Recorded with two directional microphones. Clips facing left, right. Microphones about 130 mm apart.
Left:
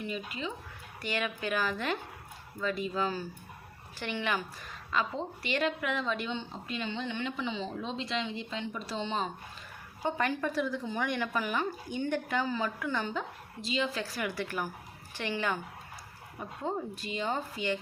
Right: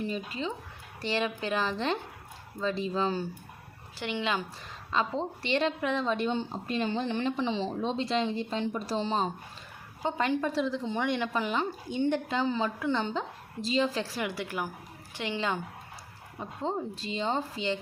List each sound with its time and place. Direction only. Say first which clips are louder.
0.0 s a woman's voice: right 4 dB; 35° right (ahead or behind)
10.0 s speech: right 2 dB; 20° right (ahead or behind)